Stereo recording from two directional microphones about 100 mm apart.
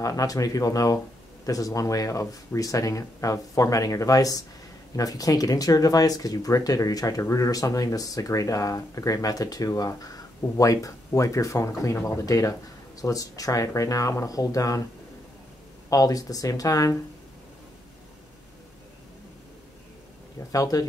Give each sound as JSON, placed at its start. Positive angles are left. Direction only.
{"t": 0.0, "sound": "speech", "side_deg": 35}
{"t": 15.9, "sound": "speech", "side_deg": 35}
{"t": 20.5, "sound": "speech", "side_deg": 35}